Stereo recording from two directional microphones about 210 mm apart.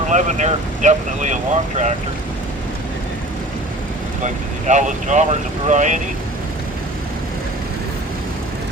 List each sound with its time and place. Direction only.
0.1 s speech: 35° right (ahead or behind)
4.2 s speech: 35° right (ahead or behind)